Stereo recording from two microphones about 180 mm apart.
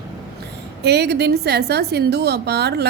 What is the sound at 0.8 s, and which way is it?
A woman's voice, 65° right (ahead or behind).